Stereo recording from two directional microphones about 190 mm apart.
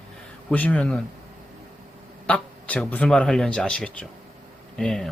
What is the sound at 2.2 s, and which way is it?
A man's voice, 5° left (ahead or behind).